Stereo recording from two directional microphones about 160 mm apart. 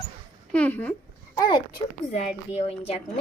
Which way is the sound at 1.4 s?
25° left (ahead or behind).